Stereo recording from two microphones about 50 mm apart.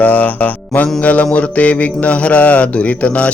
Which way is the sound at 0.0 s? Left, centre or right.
Left.